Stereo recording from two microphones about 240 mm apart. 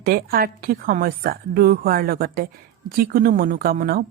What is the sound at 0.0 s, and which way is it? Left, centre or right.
A woman's voice, right.